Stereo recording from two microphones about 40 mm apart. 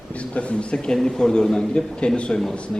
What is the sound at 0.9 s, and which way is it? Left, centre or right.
A man's voice, centre.